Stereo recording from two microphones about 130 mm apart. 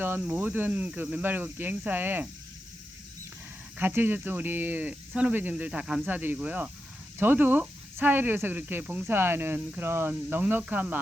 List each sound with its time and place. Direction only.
0.2 s speech: 15° right (ahead or behind)
3.8 s speech: 15° right (ahead or behind)